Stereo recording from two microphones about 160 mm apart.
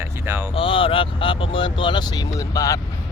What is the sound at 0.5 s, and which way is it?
Speech, 35° left (ahead or behind).